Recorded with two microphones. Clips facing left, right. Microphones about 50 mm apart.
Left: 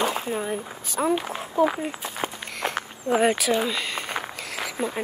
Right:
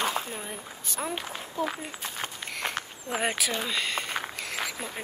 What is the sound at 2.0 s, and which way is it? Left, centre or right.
Walk, centre.